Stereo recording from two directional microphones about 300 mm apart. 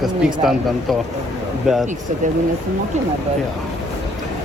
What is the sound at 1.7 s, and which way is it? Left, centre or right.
Speech, centre.